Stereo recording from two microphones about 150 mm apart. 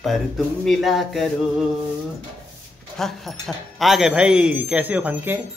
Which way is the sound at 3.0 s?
Centre (ahead or behind).